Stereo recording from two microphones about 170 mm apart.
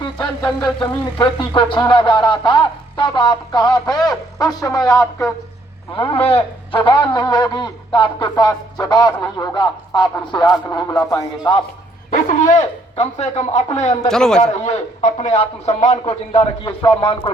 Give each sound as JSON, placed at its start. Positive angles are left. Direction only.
{"t": 0.0, "sound": "a sound", "side_deg": 25}
{"t": 5.9, "sound": "a man's voice", "side_deg": 35}
{"t": 6.7, "sound": "a sound", "side_deg": 30}
{"t": 12.1, "sound": "speech", "side_deg": 50}
{"t": 14.1, "sound": "a man's voice", "side_deg": 5}
{"t": 14.6, "sound": "a man's voice", "side_deg": 45}